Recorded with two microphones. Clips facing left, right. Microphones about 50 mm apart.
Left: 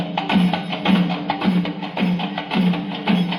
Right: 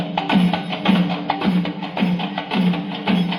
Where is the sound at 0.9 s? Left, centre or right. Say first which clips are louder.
Even; centre.